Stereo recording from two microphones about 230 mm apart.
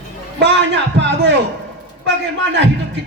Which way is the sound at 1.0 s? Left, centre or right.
Right.